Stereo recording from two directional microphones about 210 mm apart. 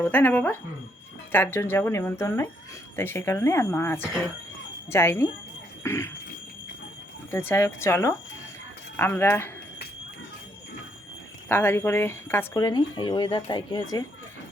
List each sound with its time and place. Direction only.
0.0 s speech: 10° left (ahead or behind)
5.8 s a sound: 10° left (ahead or behind)
7.3 s speech: 10° left (ahead or behind)
11.4 s speech: 10° left (ahead or behind)